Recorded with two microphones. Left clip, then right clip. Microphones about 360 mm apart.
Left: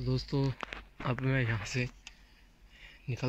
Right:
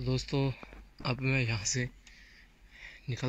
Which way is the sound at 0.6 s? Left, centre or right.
Left.